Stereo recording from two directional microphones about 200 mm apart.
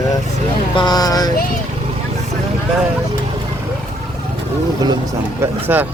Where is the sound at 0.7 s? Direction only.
20° left (ahead or behind).